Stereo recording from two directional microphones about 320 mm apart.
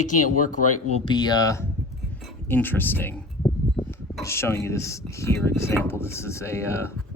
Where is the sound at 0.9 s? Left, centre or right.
Centre.